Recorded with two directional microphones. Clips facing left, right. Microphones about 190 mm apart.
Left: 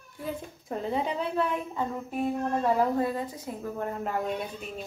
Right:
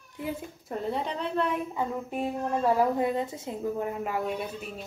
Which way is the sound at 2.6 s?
10° right (ahead or behind).